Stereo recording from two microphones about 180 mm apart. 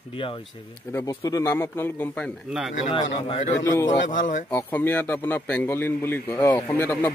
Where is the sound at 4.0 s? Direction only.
45° left (ahead or behind).